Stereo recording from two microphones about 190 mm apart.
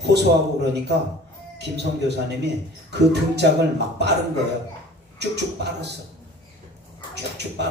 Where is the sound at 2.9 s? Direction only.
65° right (ahead or behind).